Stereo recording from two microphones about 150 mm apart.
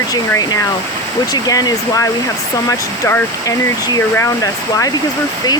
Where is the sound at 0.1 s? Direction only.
25° left (ahead or behind).